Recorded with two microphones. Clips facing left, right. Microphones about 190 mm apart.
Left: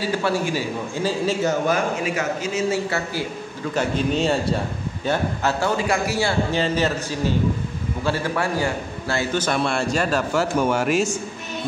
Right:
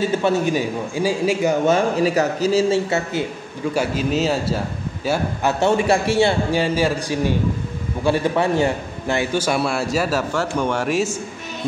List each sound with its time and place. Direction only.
0.0 s a man's voice: 20° right (ahead or behind)
1.7 s a man's voice: 35° right (ahead or behind)
3.7 s a man's voice: 5° right (ahead or behind)
5.6 s a man's voice: 25° right (ahead or behind)
6.5 s a man's voice: 10° right (ahead or behind)